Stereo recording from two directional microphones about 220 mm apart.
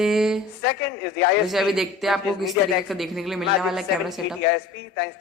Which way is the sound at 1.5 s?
Centre (ahead or behind).